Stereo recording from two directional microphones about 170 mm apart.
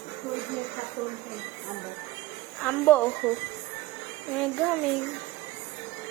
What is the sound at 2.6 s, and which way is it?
Speech, 10° left (ahead or behind).